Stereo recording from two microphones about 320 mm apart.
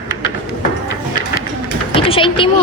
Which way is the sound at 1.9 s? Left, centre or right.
Centre.